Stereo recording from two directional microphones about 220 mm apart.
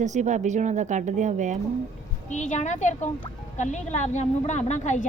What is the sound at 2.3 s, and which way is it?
A woman's voice, 35° left (ahead or behind).